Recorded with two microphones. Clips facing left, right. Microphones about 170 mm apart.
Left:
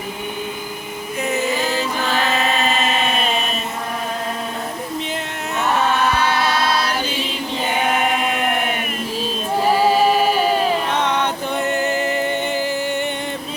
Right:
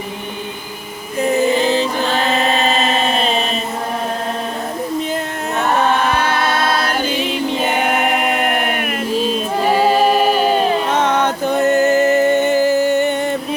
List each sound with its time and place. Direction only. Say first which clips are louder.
1.2 s music: right 7 dB; 35° right (ahead or behind)
1.5 s music: right 6 dB; 15° right (ahead or behind)
2.1 s chant: right 2 dB; 35° right (ahead or behind)
6.1 s chant: right 1 dB; 50° right (ahead or behind)
8.1 s chant: right 3 dB; 60° right (ahead or behind)
10.9 s music: right 4 dB; 45° right (ahead or behind)